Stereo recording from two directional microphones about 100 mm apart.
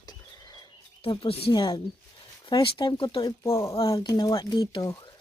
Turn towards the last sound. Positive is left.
turn(degrees=40)  # may be behind; listen again after turning